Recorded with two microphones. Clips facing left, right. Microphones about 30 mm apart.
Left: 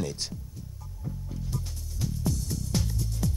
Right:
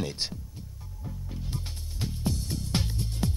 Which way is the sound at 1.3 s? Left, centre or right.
Right.